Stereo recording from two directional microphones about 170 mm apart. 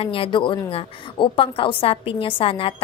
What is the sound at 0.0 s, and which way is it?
A woman's voice, 30° left (ahead or behind).